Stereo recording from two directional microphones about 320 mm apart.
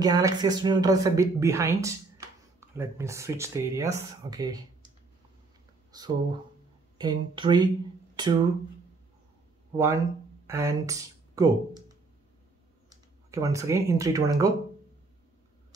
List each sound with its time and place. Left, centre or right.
0.0 s speech: centre
5.9 s speech: centre
10.4 s speech: centre
12.9 s speech: centre